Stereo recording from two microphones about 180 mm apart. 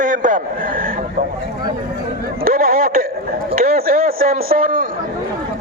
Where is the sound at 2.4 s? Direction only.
55° right (ahead or behind).